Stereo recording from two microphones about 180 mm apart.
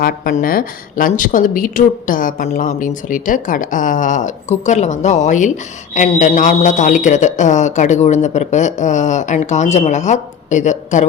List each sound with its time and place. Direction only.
0.0 s speech: 50° left (ahead or behind)